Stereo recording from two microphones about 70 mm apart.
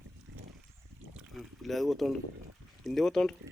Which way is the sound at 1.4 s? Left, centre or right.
Centre.